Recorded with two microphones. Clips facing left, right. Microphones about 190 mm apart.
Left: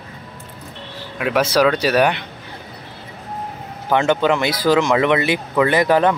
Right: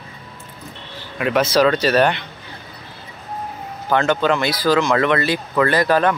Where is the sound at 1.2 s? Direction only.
5° left (ahead or behind).